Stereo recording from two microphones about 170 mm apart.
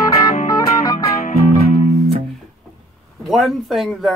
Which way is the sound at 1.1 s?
45° left (ahead or behind).